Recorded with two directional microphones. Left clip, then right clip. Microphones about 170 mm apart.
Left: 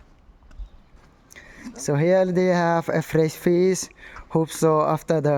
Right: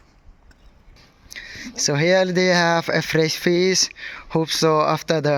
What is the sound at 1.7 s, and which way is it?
A man's voice, 10° left (ahead or behind).